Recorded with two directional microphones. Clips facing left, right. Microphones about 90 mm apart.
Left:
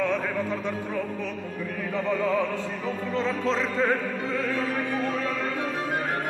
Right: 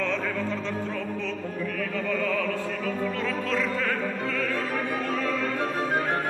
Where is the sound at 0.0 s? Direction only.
15° left (ahead or behind).